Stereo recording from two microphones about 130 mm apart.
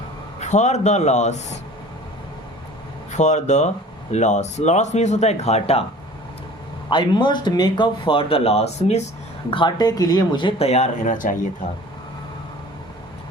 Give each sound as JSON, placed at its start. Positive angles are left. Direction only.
{"t": 0.3, "sound": "speech", "side_deg": 65}
{"t": 3.1, "sound": "speech", "side_deg": 65}
{"t": 6.9, "sound": "speech", "side_deg": 35}
{"t": 9.5, "sound": "speech", "side_deg": 35}
{"t": 10.7, "sound": "speech", "side_deg": 70}